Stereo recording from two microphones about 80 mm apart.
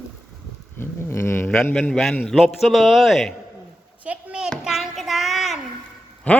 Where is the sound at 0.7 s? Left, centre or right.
Left.